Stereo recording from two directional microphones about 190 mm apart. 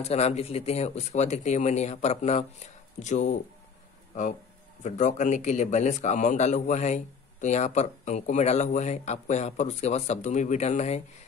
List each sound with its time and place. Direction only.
0.0 s a man's voice: 35° left (ahead or behind)